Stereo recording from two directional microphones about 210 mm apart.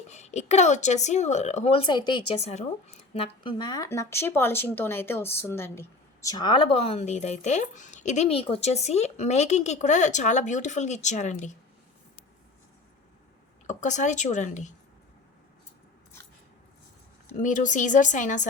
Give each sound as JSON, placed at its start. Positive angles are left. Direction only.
{"t": 0.1, "sound": "speech", "side_deg": 30}
{"t": 3.4, "sound": "speech", "side_deg": 20}
{"t": 13.7, "sound": "speech", "side_deg": 35}
{"t": 17.4, "sound": "speech", "side_deg": 40}